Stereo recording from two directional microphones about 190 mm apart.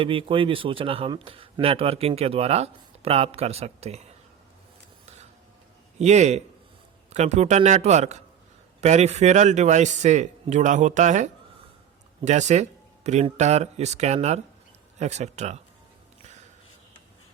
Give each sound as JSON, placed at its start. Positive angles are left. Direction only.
{"t": 0.0, "sound": "speech", "side_deg": -25}
{"t": 6.0, "sound": "speech", "side_deg": -35}